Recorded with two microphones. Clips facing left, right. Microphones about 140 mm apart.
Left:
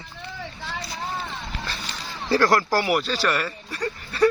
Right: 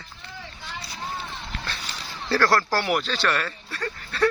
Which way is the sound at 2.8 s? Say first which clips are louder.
Left 2 dB; 5° left (ahead or behind).